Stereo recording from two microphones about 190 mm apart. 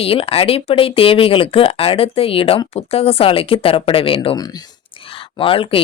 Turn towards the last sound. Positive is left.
turn(degrees=30)  # may be behind; listen again after turning